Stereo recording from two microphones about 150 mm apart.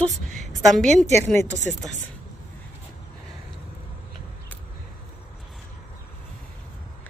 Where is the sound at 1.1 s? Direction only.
15° left (ahead or behind).